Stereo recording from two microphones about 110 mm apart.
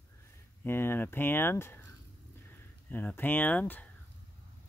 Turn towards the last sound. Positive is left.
turn(degrees=15)  # may be behind; listen again after turning